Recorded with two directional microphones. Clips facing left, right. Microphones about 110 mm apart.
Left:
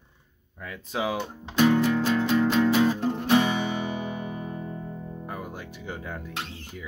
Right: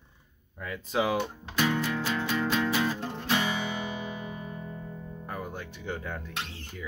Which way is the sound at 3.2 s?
25° left (ahead or behind).